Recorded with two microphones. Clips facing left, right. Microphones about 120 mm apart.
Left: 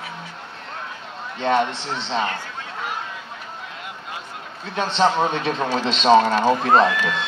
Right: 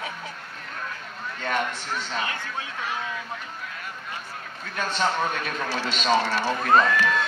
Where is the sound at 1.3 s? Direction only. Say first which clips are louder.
Left 8 dB; 25° left (ahead or behind).